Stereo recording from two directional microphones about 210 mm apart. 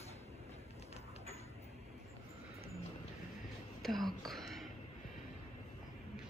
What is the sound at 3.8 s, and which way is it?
Whispering, centre (ahead or behind).